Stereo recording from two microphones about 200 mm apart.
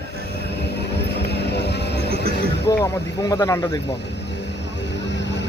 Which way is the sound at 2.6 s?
15° left (ahead or behind).